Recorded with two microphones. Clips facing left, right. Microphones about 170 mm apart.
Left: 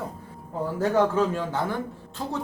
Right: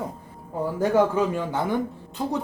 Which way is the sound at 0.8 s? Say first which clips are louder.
Right 1 dB; 15° right (ahead or behind).